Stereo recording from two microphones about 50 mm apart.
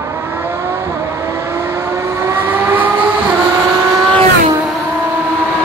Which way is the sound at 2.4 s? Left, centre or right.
Right.